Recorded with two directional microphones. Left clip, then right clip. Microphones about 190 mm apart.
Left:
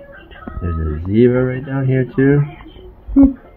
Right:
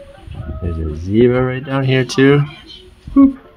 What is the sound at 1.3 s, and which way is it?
Speech, 30° right (ahead or behind).